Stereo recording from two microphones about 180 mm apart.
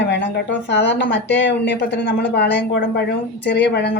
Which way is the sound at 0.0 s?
70° left (ahead or behind).